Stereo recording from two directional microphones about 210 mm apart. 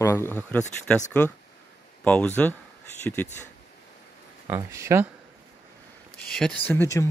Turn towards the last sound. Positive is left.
turn(degrees=10)  # may be behind; listen again after turning